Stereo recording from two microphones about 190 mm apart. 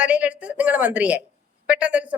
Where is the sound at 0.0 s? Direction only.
5° right (ahead or behind).